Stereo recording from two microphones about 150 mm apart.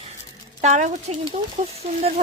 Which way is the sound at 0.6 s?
55° right (ahead or behind).